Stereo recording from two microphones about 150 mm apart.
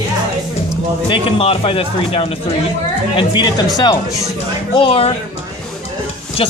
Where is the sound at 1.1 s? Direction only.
35° left (ahead or behind).